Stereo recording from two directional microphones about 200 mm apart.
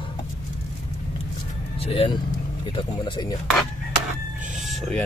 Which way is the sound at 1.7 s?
25° left (ahead or behind).